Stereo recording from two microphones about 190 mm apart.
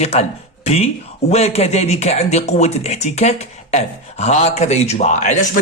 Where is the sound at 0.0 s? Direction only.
35° left (ahead or behind).